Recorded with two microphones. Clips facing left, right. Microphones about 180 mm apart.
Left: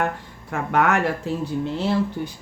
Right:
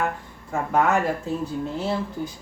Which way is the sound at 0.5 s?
75° left (ahead or behind).